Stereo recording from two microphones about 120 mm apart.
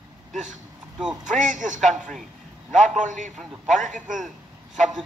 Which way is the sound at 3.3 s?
Centre (ahead or behind).